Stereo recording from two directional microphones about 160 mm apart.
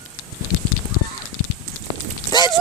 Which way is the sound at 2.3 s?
25° left (ahead or behind).